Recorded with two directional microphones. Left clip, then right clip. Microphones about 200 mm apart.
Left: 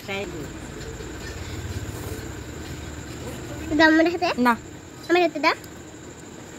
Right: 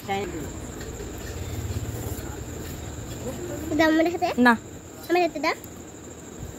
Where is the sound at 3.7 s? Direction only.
15° left (ahead or behind).